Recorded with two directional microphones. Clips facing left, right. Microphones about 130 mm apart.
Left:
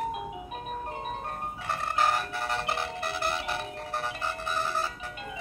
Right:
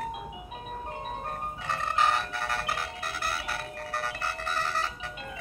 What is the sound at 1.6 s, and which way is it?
Music, 5° left (ahead or behind).